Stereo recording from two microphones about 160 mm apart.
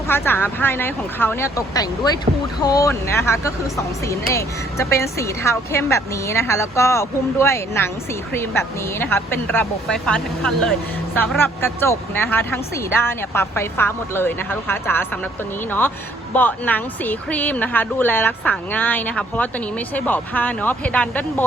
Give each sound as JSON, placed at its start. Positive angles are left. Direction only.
{"t": 0.1, "sound": "speech", "side_deg": 15}
{"t": 16.3, "sound": "speech", "side_deg": 10}